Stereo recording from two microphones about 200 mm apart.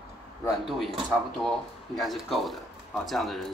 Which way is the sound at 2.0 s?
Centre (ahead or behind).